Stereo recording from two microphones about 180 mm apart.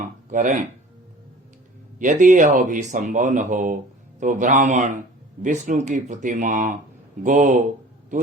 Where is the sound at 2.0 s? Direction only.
45° right (ahead or behind).